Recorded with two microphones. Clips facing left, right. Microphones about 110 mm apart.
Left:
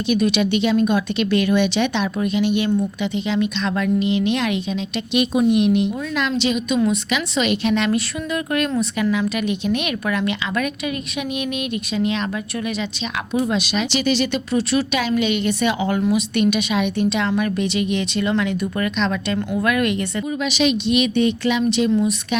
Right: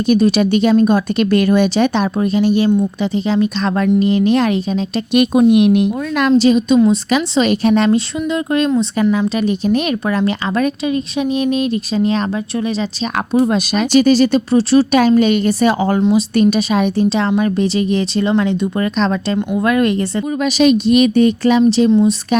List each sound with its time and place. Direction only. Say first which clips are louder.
0.1 s speech: right 6 dB; 40° right (ahead or behind)
5.2 s speech: right 6 dB; 55° right (ahead or behind); by 7.9 s 40° right (ahead or behind)
7.9 s speech: right 6 dB; 25° right (ahead or behind)
13.3 s speech: right 6 dB; 45° right (ahead or behind)
21.8 s speech: right 7 dB; 25° right (ahead or behind)